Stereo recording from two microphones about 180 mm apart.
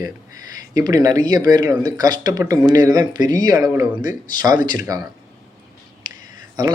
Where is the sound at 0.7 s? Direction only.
20° right (ahead or behind).